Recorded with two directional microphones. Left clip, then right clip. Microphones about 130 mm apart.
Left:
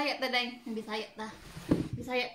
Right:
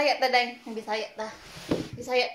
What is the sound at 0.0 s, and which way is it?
A woman's voice, 35° left (ahead or behind).